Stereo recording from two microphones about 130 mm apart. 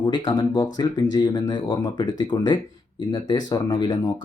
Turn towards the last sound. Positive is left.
turn(degrees=35)  # may be behind; listen again after turning